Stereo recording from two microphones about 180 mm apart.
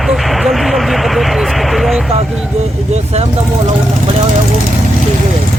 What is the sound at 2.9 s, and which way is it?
Speech, 35° right (ahead or behind).